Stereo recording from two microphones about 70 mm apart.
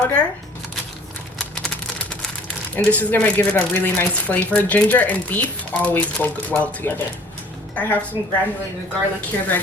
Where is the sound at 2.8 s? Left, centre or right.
Left.